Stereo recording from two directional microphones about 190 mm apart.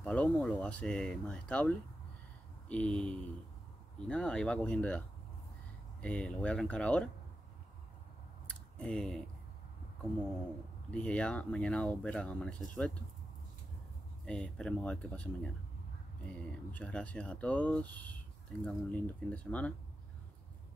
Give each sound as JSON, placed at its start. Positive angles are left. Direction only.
{"t": 0.0, "sound": "speech", "side_deg": 5}
{"t": 8.5, "sound": "a sound", "side_deg": 5}
{"t": 10.9, "sound": "speech", "side_deg": 5}
{"t": 14.2, "sound": "speech", "side_deg": 5}